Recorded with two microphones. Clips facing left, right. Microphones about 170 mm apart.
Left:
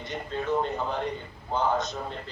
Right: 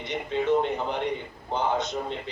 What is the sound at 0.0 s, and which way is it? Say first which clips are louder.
Speech: right 3 dB; 80° right.